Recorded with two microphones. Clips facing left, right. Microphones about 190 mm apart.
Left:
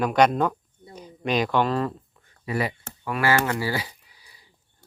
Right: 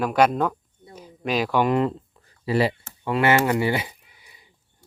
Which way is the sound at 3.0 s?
25° right (ahead or behind).